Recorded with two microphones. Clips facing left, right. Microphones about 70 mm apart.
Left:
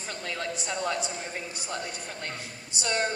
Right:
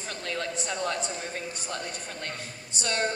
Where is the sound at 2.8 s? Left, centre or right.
Centre.